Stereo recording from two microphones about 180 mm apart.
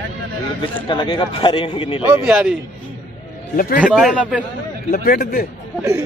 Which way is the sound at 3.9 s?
5° left (ahead or behind).